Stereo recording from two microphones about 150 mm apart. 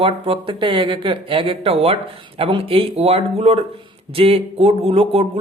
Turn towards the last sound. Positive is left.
turn(degrees=-40)  # may be behind; listen again after turning